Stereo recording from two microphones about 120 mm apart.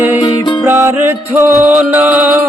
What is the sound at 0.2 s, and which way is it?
Music, 40° left (ahead or behind).